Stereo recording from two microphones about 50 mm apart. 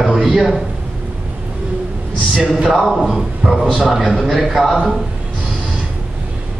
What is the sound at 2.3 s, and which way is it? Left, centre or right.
Speech, right.